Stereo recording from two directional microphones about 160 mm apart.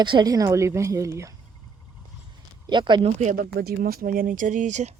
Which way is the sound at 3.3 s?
70° right (ahead or behind).